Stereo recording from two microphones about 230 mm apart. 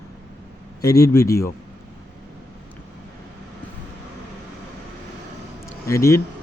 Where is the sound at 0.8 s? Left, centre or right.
Centre.